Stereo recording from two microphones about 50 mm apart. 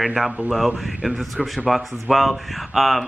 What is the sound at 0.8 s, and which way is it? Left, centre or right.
A man's voice, centre.